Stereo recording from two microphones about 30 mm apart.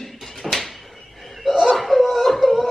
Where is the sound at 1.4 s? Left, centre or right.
Centre.